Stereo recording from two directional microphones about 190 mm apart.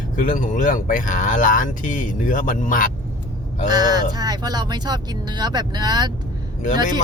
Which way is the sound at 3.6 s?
20° right (ahead or behind).